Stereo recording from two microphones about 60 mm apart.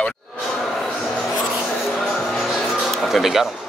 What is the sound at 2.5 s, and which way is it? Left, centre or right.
Music, centre.